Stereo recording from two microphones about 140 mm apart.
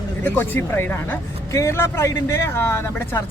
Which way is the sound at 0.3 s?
15° left (ahead or behind).